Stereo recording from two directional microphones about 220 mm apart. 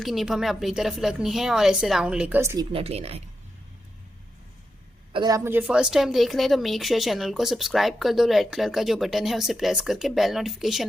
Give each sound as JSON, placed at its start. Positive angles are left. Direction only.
{"t": 0.0, "sound": "a woman's voice", "side_deg": 0}
{"t": 2.7, "sound": "speech", "side_deg": -25}
{"t": 5.1, "sound": "a woman's voice", "side_deg": -15}